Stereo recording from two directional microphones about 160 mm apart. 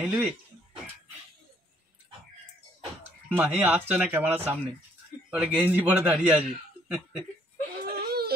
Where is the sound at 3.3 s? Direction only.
10° right (ahead or behind).